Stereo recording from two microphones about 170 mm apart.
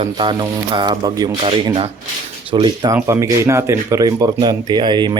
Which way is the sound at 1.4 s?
35° right (ahead or behind).